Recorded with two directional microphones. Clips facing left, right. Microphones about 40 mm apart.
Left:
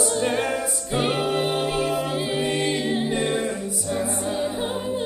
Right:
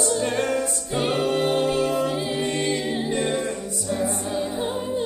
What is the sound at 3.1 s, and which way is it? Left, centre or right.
A capella, centre.